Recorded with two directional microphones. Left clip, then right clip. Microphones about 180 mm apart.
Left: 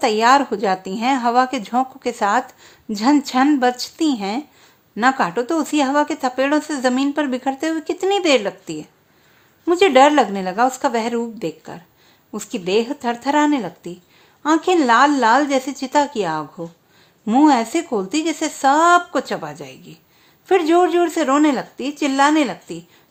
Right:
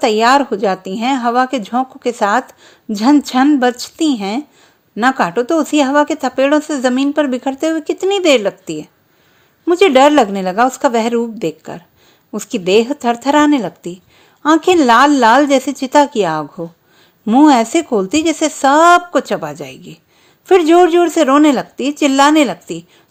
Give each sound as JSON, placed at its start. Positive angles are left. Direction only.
{"t": 0.0, "sound": "a woman's voice", "side_deg": -25}